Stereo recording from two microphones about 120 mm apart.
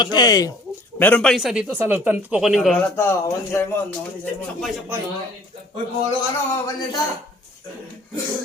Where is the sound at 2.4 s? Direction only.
5° right (ahead or behind).